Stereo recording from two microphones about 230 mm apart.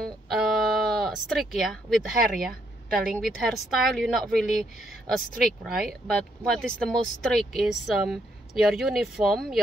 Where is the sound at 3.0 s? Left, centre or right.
Centre.